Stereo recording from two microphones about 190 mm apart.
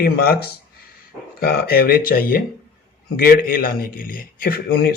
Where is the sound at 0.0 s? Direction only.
55° left (ahead or behind).